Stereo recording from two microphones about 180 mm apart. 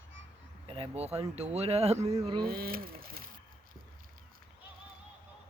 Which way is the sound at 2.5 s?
55° right (ahead or behind).